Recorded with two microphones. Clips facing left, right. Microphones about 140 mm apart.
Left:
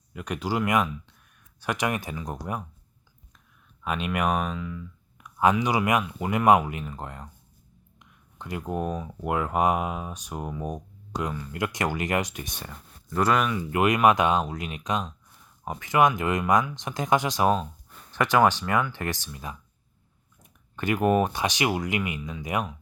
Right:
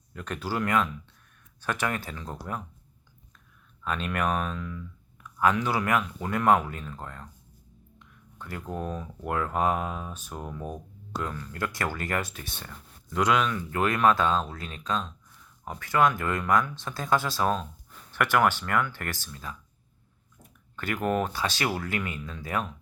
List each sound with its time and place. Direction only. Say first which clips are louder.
0.1 s speech: left 3 dB; 10° left (ahead or behind)
3.8 s speech: left 2 dB; 10° left (ahead or behind)